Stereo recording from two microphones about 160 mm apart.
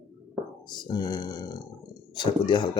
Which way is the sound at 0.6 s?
25° left (ahead or behind).